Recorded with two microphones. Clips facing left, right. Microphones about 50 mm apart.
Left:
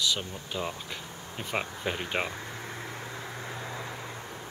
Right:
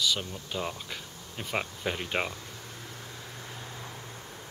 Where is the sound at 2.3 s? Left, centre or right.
Left.